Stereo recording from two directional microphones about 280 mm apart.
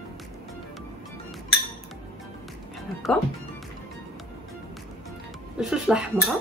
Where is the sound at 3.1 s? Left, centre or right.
Centre.